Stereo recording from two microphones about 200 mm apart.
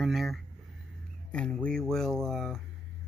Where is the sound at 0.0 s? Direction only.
Centre (ahead or behind).